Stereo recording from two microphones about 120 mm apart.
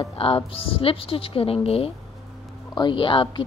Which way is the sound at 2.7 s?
40° left (ahead or behind).